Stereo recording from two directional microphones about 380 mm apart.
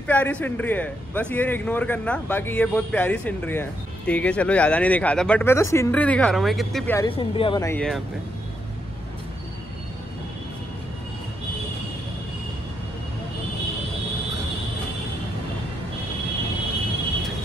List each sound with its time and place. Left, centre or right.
0.0 s speech: centre